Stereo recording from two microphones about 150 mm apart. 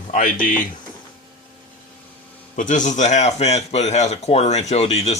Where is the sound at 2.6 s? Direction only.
55° left (ahead or behind).